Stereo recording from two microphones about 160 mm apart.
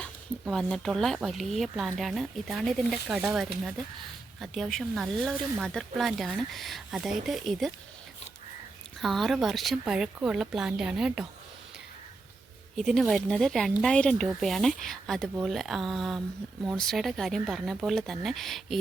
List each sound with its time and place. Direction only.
0.0 s speech: 5° left (ahead or behind)
9.0 s speech: centre (ahead or behind)
12.7 s speech: centre (ahead or behind)